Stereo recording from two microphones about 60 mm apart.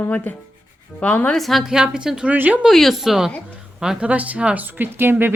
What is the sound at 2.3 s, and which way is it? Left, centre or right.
Speech, right.